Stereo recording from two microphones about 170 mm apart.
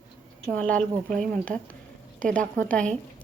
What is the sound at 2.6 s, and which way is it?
Speech, 5° left (ahead or behind).